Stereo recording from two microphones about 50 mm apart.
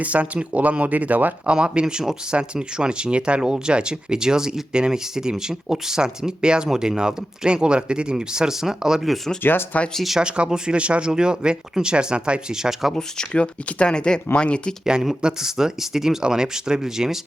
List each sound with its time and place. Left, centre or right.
0.0 s speech: right
1.5 s speech: centre
9.4 s speech: left
9.9 s speech: centre
10.2 s speech: centre
12.9 s speech: centre
14.8 s speech: centre